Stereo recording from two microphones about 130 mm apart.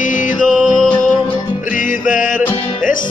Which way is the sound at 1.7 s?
90° left.